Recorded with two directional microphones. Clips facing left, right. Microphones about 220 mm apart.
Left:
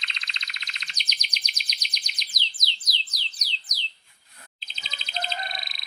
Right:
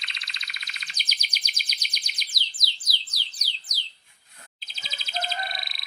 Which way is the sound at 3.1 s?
30° right (ahead or behind).